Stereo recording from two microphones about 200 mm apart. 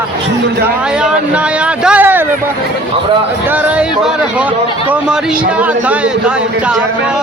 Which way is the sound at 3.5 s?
5° right (ahead or behind).